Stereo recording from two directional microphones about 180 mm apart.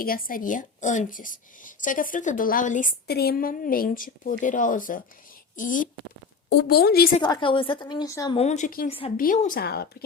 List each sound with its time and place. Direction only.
0.0 s a woman's voice: 50° left (ahead or behind)
3.1 s a woman's voice: 60° left (ahead or behind)
6.5 s speech: 65° left (ahead or behind)
7.2 s a woman's voice: 25° left (ahead or behind)
8.4 s a woman's voice: 40° left (ahead or behind)
8.9 s a woman's voice: 30° left (ahead or behind)
9.1 s speech: 45° left (ahead or behind)